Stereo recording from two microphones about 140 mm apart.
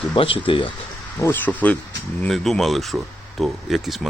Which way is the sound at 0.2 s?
40° left (ahead or behind).